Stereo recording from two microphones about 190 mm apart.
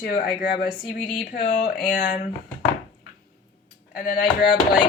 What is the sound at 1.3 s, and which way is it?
Speech, 50° left (ahead or behind).